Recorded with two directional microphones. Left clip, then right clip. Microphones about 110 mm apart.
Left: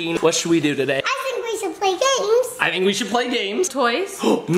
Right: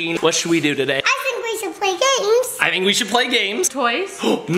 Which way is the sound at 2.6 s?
Centre (ahead or behind).